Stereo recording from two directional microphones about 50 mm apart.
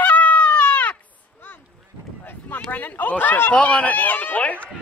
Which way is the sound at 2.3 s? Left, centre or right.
Left.